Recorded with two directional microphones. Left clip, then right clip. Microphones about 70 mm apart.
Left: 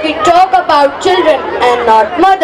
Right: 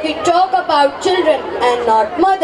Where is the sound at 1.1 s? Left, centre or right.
Left.